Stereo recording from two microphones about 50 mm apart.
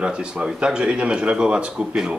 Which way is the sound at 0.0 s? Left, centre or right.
Centre.